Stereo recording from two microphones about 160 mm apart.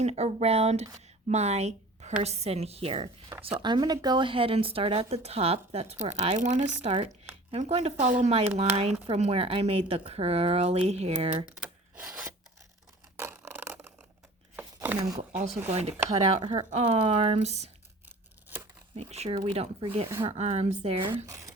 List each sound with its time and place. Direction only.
0.0 s speech: 45° right (ahead or behind)
11.4 s rub: 5° right (ahead or behind)
13.1 s a sound: 15° right (ahead or behind)
14.9 s speech: 25° right (ahead or behind)
15.3 s speech: 10° right (ahead or behind)
15.7 s speech: 40° right (ahead or behind)
16.6 s speech: 45° right (ahead or behind)
18.5 s a sound: 10° right (ahead or behind)
18.9 s speech: 40° right (ahead or behind)
21.2 s speech: 20° right (ahead or behind)